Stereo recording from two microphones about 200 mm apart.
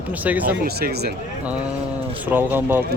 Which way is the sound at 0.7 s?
50° right (ahead or behind).